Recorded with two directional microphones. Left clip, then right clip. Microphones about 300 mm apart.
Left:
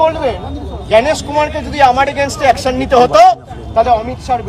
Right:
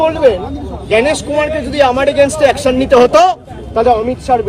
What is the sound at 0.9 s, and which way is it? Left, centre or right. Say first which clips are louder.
A man's voice: left 1 dB; centre.